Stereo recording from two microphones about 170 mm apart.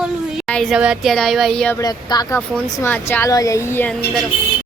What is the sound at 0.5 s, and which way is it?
A man's voice, centre (ahead or behind).